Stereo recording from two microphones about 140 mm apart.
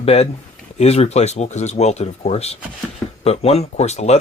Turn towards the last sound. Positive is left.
turn(degrees=50)  # may be behind; listen again after turning